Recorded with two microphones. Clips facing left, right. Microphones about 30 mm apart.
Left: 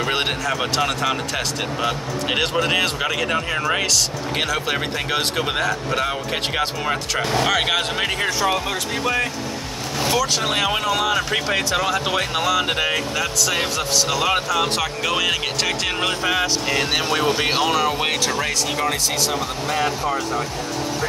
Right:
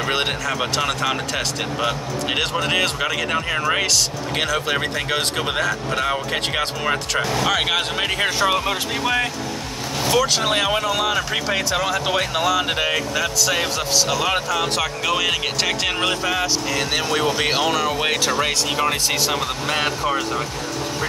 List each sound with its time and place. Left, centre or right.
0.0 s speech: centre
8.2 s speech: centre
16.3 s speech: centre
17.4 s speech: centre
18.8 s speech: right
19.7 s speech: right